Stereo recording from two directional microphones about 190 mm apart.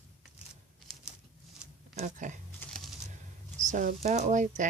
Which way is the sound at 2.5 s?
Centre (ahead or behind).